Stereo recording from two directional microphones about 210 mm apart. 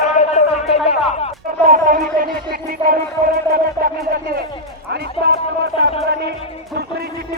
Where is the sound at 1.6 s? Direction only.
40° right (ahead or behind).